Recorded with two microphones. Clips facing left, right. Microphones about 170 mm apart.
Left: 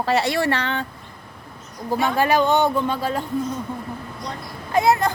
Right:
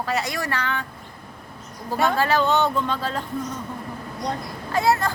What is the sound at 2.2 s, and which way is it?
Speech, 15° left (ahead or behind).